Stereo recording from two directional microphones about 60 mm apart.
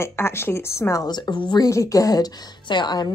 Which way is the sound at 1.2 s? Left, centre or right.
Left.